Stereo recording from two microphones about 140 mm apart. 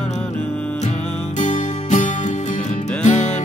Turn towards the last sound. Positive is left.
turn(degrees=60)  # may be behind; listen again after turning